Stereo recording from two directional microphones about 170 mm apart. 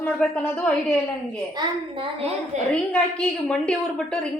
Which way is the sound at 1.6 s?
25° right (ahead or behind).